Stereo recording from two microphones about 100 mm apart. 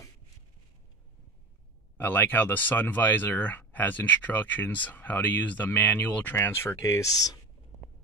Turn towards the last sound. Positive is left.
turn(degrees=35)  # may be behind; listen again after turning